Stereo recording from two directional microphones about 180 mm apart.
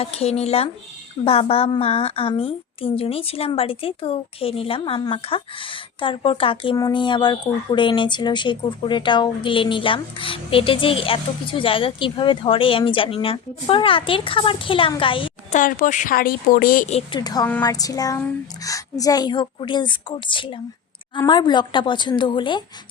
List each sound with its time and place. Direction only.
0.0 s a woman's voice: 35° left (ahead or behind)
15.5 s a woman's voice: 45° left (ahead or behind)
17.1 s a woman's voice: 20° left (ahead or behind)